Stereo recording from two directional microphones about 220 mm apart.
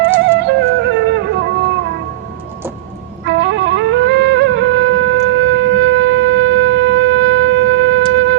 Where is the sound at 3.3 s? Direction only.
55° right (ahead or behind).